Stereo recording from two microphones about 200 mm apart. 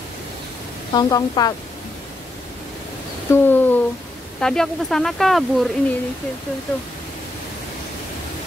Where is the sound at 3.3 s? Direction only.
10° left (ahead or behind).